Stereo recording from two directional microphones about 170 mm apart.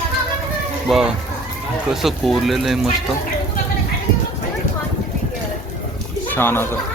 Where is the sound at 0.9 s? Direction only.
Centre (ahead or behind).